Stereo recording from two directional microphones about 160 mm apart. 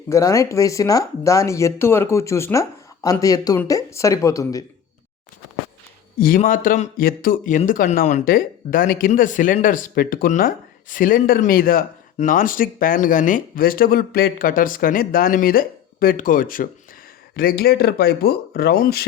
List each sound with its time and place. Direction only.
0.1 s speech: 20° left (ahead or behind)
6.1 s speech: 60° left (ahead or behind)
17.3 s speech: 70° left (ahead or behind)